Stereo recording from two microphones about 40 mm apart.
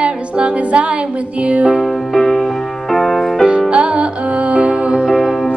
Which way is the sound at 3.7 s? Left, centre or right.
Right.